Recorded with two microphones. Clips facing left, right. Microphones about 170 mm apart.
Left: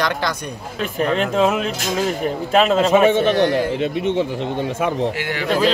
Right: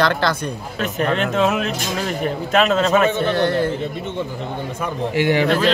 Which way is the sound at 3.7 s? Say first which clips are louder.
Left 6 dB; 75° left (ahead or behind).